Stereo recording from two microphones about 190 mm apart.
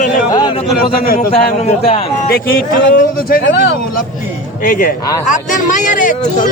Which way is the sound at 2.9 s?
50° left (ahead or behind).